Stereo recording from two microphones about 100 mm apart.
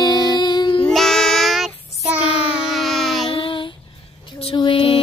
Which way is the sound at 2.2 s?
75° left (ahead or behind).